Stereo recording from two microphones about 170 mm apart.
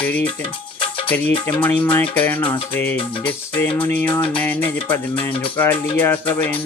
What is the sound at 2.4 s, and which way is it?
Speech, 30° left (ahead or behind).